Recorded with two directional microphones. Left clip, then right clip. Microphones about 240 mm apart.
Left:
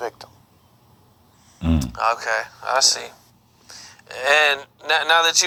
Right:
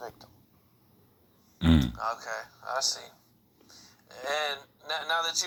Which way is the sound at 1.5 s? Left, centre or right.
Centre.